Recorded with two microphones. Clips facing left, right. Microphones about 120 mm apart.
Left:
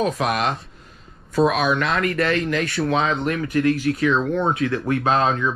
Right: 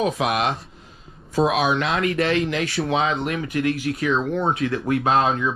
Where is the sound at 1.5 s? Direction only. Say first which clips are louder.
Even; 50° left (ahead or behind).